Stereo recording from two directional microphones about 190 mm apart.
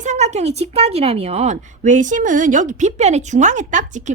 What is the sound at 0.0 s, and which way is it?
A woman's voice, 35° right (ahead or behind).